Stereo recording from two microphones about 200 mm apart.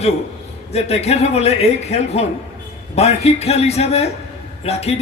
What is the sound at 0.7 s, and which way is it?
A man's voice, 30° left (ahead or behind).